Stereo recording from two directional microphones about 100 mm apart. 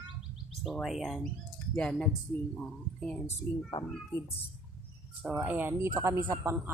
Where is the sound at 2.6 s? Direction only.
5° left (ahead or behind).